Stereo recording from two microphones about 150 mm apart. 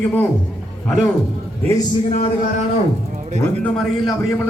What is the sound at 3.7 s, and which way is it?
Speech, centre (ahead or behind).